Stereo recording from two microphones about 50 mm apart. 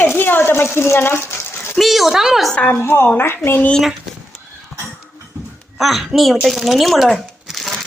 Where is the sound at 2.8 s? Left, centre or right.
Left.